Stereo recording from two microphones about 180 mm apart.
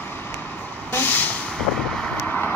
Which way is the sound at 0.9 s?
10° left (ahead or behind).